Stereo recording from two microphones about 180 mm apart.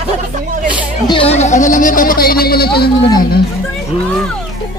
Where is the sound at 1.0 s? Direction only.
30° left (ahead or behind); by 2.9 s 60° left (ahead or behind).